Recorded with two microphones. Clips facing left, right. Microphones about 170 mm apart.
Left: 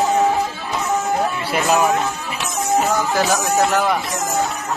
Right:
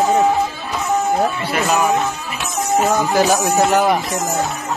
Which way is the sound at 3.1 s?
20° right (ahead or behind).